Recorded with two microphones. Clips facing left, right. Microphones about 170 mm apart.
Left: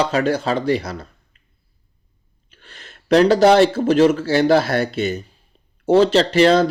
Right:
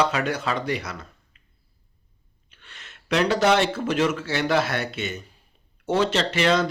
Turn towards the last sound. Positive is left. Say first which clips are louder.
# left 8 dB
turn(degrees=35)  # may be behind; listen again after turning